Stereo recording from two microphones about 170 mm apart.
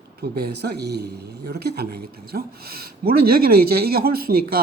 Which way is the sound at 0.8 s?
75° right (ahead or behind).